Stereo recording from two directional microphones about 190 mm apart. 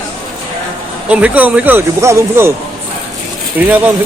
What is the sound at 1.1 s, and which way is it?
Speech, 5° right (ahead or behind).